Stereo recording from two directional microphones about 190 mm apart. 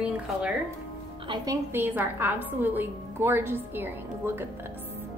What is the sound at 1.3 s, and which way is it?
Speech, 25° right (ahead or behind).